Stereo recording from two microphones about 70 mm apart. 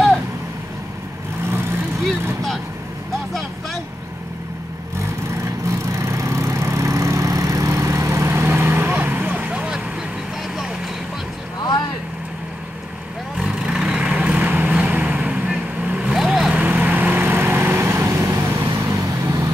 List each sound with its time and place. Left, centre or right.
5.7 s vehicle: right; by 9.8 s centre
13.4 s vehicle: centre; by 19.5 s right